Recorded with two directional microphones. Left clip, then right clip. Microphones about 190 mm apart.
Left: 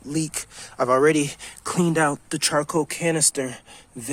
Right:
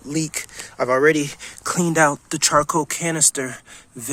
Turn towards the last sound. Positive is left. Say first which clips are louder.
# right 1 dB
turn(degrees=0)  # may be behind; listen again after turning